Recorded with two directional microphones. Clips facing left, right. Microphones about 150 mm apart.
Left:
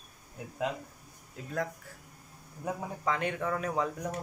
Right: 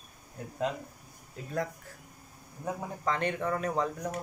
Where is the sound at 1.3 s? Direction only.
Centre (ahead or behind).